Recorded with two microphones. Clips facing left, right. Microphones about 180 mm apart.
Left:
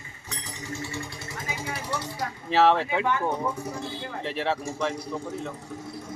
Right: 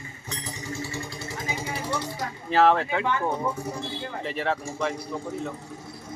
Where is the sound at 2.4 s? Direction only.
Centre (ahead or behind).